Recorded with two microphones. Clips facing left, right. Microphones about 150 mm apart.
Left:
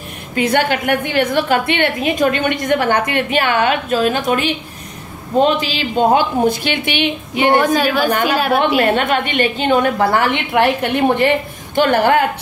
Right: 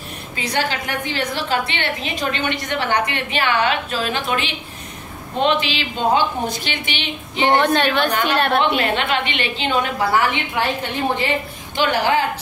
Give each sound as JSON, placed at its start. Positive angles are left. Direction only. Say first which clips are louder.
{"t": 0.3, "sound": "a woman's voice", "louder": "left 8 dB", "side_deg": 55}
{"t": 7.3, "sound": "a woman's voice", "louder": "left 2 dB", "side_deg": 10}
{"t": 8.7, "sound": "a woman's voice", "louder": "left 5 dB", "side_deg": 50}